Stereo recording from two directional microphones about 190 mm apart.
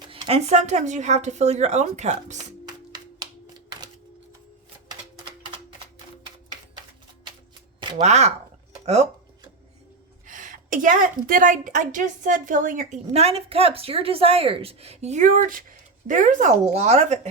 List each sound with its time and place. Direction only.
0.1 s a woman's voice: 30° right (ahead or behind)
2.6 s music: 20° right (ahead or behind)
7.8 s a sound: 25° right (ahead or behind)
8.0 s a woman's voice: 35° right (ahead or behind)
10.2 s a woman's voice: 45° right (ahead or behind)